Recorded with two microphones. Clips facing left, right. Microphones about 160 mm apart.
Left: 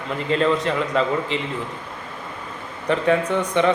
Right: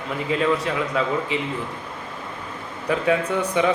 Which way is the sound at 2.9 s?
10° right (ahead or behind).